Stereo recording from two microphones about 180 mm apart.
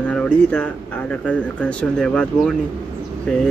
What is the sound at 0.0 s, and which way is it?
Speech, 5° left (ahead or behind).